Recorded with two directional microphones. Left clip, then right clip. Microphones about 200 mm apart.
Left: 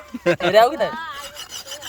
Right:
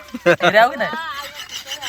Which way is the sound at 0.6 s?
60° left (ahead or behind).